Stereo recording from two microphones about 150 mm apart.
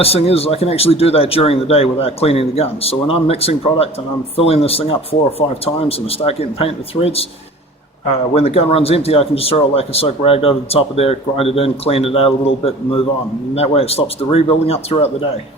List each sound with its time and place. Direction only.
0.0 s speech: 40° left (ahead or behind)
8.4 s speech: 40° left (ahead or behind)